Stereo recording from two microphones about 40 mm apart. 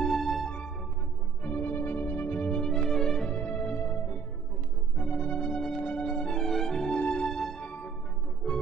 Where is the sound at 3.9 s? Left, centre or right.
Left.